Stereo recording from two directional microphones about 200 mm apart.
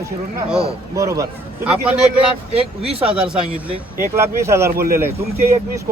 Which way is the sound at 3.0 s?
5° right (ahead or behind).